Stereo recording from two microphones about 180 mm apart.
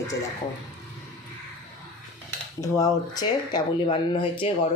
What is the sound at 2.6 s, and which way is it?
Speech, 20° left (ahead or behind).